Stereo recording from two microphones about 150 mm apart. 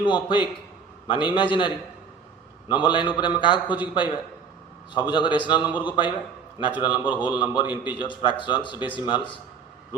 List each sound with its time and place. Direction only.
0.0 s a man's voice: 30° left (ahead or behind)